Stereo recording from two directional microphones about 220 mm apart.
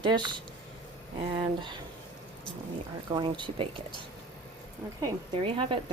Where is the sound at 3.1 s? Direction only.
20° right (ahead or behind).